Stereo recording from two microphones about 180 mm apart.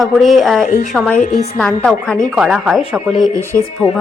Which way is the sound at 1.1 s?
40° left (ahead or behind).